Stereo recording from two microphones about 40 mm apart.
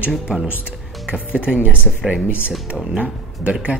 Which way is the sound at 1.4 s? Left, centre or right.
Right.